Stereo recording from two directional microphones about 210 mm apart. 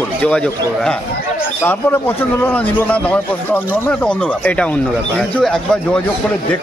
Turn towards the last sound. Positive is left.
turn(degrees=0)  # may be behind; listen again after turning